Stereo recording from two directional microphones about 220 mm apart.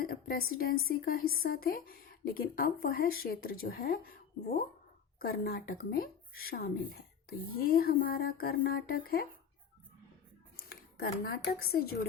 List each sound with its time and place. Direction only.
0.0 s speech: 45° left (ahead or behind)
10.7 s speech: 45° left (ahead or behind)